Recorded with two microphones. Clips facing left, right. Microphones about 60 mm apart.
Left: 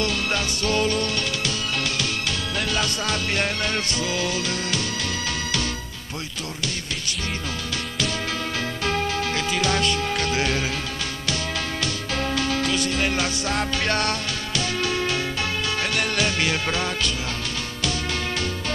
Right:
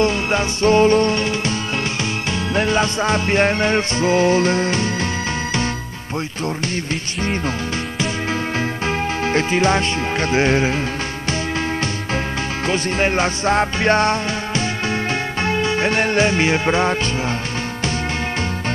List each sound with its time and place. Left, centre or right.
0.0 s music: right
2.5 s music: right
8.8 s speech: right
12.6 s music: right